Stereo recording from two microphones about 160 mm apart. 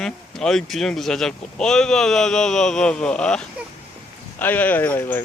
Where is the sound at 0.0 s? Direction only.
5° left (ahead or behind).